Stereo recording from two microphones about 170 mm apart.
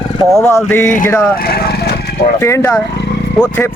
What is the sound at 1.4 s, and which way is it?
Vehicle, 65° left (ahead or behind).